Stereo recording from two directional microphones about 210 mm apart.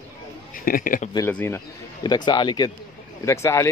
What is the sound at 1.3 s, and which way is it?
Speech, 10° left (ahead or behind).